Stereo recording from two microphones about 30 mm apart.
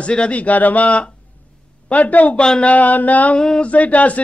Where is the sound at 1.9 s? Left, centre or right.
Left.